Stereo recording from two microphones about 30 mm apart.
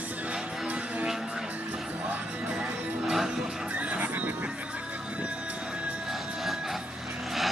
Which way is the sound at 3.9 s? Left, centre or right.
Right.